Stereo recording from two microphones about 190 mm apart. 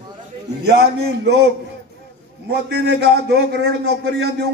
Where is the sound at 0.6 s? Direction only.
60° right (ahead or behind).